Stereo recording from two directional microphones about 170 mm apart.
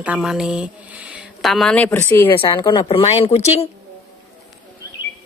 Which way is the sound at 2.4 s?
30° left (ahead or behind).